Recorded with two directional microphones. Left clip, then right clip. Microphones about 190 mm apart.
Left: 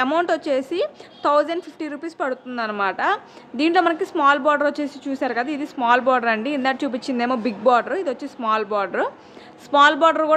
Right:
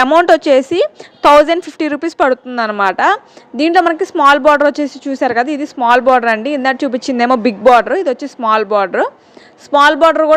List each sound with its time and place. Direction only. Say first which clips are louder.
0.0 s a woman's voice: right 11 dB; 35° right (ahead or behind)